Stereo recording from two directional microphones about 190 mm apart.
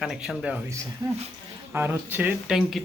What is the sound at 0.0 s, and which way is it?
Speech, 5° right (ahead or behind).